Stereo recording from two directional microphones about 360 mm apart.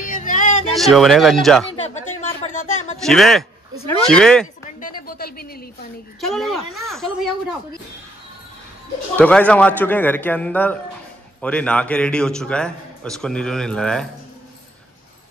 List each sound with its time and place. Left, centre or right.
0.0 s a sound: left
0.7 s a man's voice: centre
3.1 s a man's voice: centre
4.6 s a sound: left
6.2 s a man's voice: centre
9.1 s a man's voice: centre